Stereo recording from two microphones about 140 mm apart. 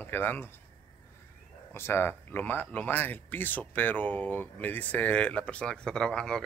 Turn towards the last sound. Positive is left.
turn(degrees=5)  # may be behind; listen again after turning